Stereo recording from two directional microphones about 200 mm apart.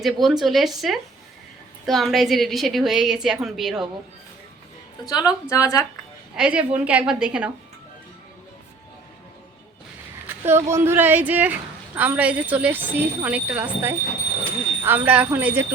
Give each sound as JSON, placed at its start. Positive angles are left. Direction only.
{"t": 0.0, "sound": "a woman's voice", "side_deg": 0}
{"t": 5.0, "sound": "a woman's voice", "side_deg": 20}
{"t": 6.3, "sound": "a woman's voice", "side_deg": -5}
{"t": 10.2, "sound": "speech", "side_deg": -10}